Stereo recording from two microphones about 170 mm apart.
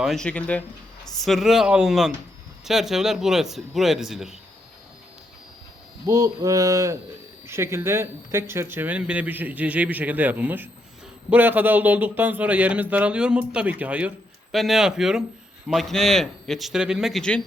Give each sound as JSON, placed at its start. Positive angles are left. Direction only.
{"t": 0.0, "sound": "a man's voice", "side_deg": 0}
{"t": 6.1, "sound": "a man's voice", "side_deg": -20}